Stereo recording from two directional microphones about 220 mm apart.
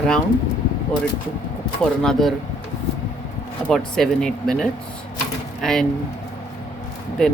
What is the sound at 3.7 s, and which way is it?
Speech, centre (ahead or behind).